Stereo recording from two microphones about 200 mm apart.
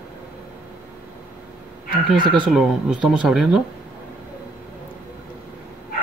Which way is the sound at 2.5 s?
5° right (ahead or behind).